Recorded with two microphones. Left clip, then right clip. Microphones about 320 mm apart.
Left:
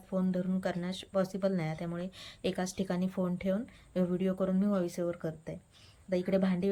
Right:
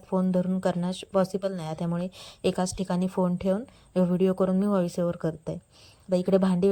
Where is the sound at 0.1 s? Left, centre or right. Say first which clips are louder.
Right 7 dB; centre.